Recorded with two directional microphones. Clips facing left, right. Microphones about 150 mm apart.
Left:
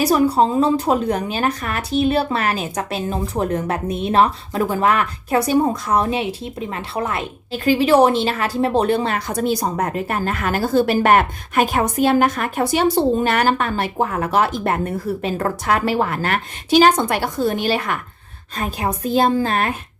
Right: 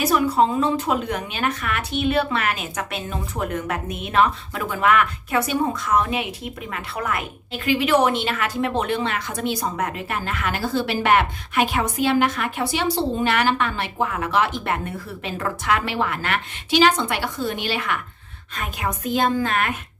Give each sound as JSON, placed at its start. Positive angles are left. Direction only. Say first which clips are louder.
{"t": 0.0, "sound": "speech", "louder": "left 3 dB", "side_deg": 35}